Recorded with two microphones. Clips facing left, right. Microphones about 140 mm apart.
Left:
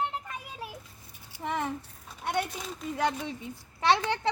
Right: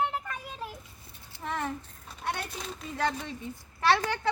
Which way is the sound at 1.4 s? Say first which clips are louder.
Left 2 dB; 15° left (ahead or behind).